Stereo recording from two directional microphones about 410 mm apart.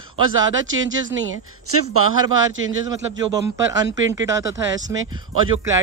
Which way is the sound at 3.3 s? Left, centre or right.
Centre.